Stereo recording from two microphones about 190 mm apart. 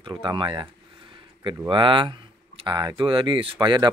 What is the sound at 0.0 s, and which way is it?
Speech, 25° right (ahead or behind).